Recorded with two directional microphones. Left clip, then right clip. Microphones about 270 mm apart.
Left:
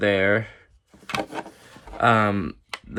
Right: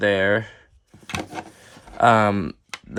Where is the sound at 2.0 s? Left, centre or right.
Centre.